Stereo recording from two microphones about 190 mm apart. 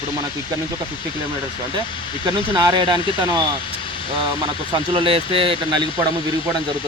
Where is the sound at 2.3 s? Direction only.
25° right (ahead or behind).